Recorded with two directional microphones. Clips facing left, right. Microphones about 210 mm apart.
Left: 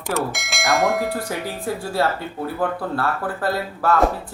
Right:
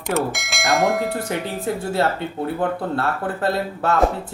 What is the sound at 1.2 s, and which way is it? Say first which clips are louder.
Speech: right 2 dB; 20° right (ahead or behind).